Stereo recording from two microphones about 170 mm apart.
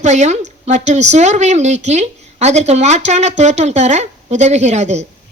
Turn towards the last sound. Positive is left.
turn(degrees=-40)  # may be behind; listen again after turning